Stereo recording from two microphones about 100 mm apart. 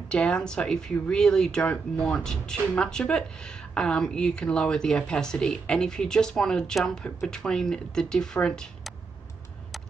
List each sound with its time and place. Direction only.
0.1 s speech: 10° left (ahead or behind)